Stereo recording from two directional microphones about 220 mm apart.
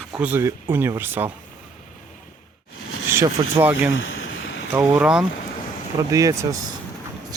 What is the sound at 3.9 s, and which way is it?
Vehicle, 60° left (ahead or behind).